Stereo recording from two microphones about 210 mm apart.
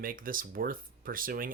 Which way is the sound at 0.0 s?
40° right (ahead or behind).